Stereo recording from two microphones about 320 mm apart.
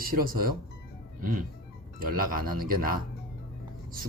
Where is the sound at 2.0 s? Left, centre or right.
Right.